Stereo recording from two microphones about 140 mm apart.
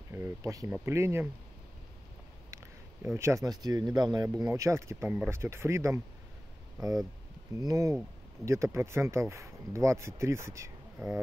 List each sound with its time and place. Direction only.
0.1 s speech: 20° right (ahead or behind)
2.5 s speech: 20° right (ahead or behind)
8.4 s speech: centre (ahead or behind)
8.7 s speech: 20° right (ahead or behind)